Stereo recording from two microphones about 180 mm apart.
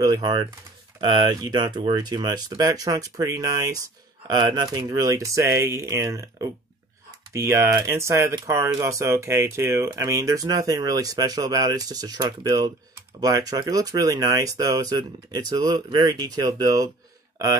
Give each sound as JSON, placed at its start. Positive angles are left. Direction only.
{"t": 0.0, "sound": "speech", "side_deg": -20}